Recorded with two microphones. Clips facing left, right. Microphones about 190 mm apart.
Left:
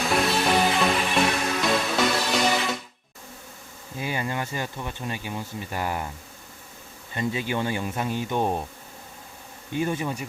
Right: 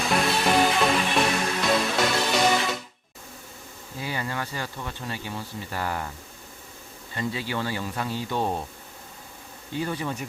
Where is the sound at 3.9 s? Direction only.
15° left (ahead or behind).